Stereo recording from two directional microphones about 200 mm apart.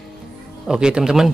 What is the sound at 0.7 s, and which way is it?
Speech, 5° right (ahead or behind).